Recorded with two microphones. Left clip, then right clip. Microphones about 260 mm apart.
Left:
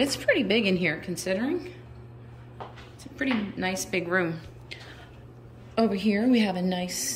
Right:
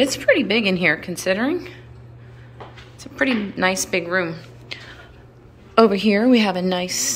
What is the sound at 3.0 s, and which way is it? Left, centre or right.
A woman's voice, centre.